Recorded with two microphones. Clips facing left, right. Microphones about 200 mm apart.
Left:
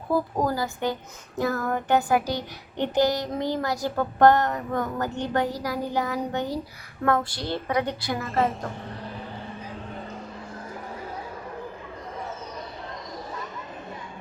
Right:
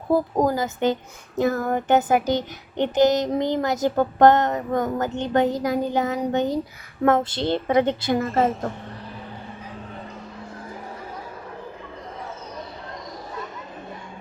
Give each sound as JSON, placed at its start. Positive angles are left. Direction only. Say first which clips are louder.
{"t": 0.3, "sound": "child singing", "louder": "right 4 dB", "side_deg": -20}
{"t": 8.3, "sound": "a woman's voice", "louder": "right 1 dB", "side_deg": 0}